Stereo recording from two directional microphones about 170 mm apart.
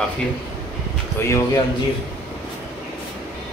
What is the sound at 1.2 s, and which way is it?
Speech, 15° left (ahead or behind).